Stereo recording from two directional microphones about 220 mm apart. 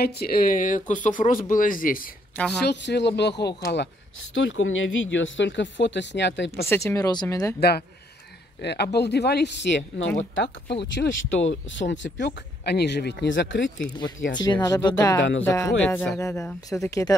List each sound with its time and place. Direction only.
0.0 s speech: 45° left (ahead or behind)
2.6 s speech: 50° left (ahead or behind)
6.6 s speech: 10° left (ahead or behind)
8.6 s speech: 50° left (ahead or behind)
14.3 s speech: 20° left (ahead or behind)